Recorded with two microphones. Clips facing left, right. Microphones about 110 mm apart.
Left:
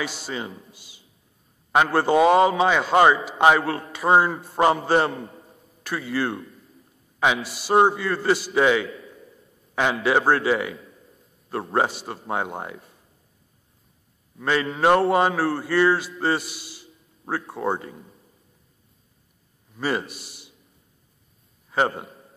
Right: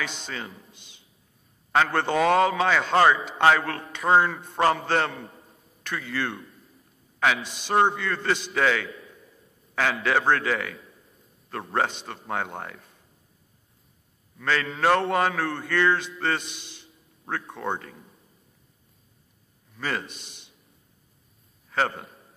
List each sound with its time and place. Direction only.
0.0 s speech: 10° left (ahead or behind)
7.4 s speech: 5° left (ahead or behind)
14.4 s speech: 15° left (ahead or behind)
19.8 s speech: 10° left (ahead or behind)
21.6 s a man's voice: 15° left (ahead or behind)